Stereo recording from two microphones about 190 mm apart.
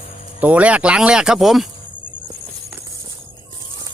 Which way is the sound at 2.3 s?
15° right (ahead or behind).